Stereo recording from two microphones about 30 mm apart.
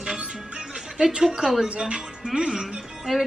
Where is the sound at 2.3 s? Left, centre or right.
Right.